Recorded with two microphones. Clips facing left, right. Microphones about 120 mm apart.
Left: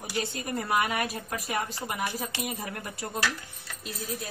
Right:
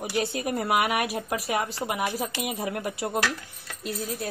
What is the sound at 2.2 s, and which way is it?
Speech, 15° right (ahead or behind).